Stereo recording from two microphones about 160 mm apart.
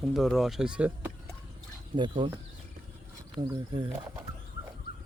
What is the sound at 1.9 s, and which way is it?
Speech, 30° right (ahead or behind).